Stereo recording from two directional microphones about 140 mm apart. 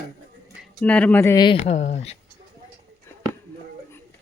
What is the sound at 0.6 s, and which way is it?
Speech, 10° left (ahead or behind).